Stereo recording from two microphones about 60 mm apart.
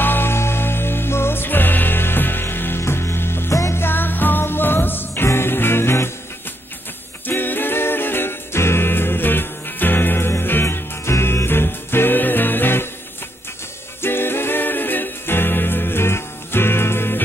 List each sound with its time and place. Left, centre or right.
0.0 s music: left
3.5 s music: left
3.8 s music: left
7.2 s music: left
14.0 s music: left